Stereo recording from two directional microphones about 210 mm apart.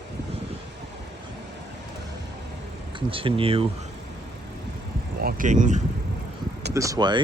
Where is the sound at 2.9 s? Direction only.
25° right (ahead or behind).